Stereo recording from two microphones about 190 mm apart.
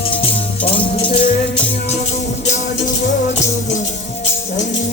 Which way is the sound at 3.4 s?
40° left (ahead or behind).